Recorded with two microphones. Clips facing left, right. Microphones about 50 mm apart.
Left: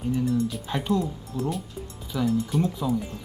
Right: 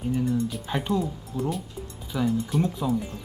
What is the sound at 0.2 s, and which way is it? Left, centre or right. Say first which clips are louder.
A man's voice: left 1 dB; centre.